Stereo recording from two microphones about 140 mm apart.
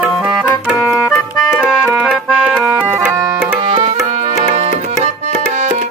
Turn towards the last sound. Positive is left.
turn(degrees=-45)  # may be behind; listen again after turning